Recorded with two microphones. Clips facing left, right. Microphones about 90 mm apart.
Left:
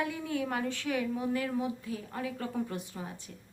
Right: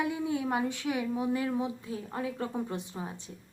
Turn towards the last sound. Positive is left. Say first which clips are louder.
# right 2 dB
turn(degrees=-25)  # may be behind; listen again after turning